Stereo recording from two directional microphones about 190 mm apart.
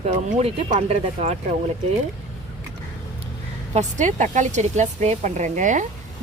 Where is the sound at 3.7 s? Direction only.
40° right (ahead or behind).